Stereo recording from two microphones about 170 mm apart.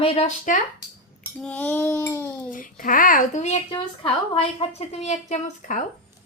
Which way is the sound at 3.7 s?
30° left (ahead or behind).